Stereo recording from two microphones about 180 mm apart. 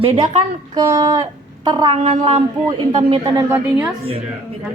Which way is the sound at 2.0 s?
35° right (ahead or behind).